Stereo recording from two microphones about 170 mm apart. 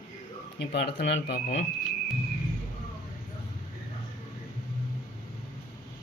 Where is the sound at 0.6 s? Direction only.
75° left (ahead or behind).